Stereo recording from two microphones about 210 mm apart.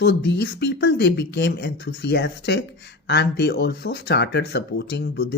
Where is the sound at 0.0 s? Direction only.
55° left (ahead or behind).